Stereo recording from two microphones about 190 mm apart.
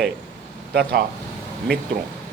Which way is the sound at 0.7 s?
55° right (ahead or behind).